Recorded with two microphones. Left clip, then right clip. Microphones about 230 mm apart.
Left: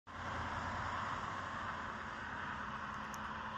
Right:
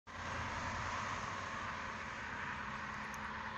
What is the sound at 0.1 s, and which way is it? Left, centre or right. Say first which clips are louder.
Vehicle: even; right.